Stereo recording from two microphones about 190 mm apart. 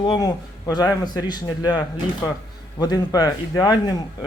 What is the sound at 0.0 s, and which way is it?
Speech, 20° left (ahead or behind).